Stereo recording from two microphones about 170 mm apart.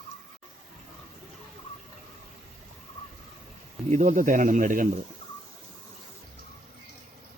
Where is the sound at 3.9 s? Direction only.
45° right (ahead or behind).